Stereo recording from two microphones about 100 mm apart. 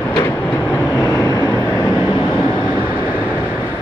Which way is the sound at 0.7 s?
20° left (ahead or behind).